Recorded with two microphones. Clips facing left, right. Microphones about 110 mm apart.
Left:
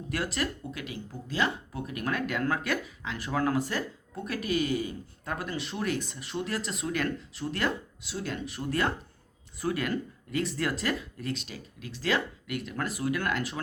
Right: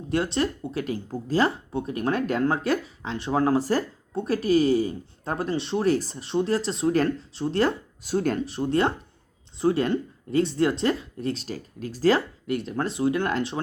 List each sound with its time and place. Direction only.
0.1 s speech: 30° right (ahead or behind)
8.0 s speech: 45° right (ahead or behind)
8.4 s speech: 30° right (ahead or behind)